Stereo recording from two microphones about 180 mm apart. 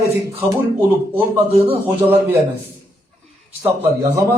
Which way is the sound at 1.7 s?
10° right (ahead or behind).